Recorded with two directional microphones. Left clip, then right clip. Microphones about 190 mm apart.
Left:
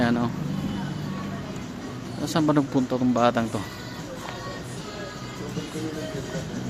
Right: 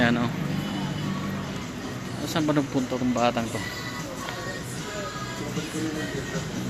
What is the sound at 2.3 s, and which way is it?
Speech, 30° left (ahead or behind).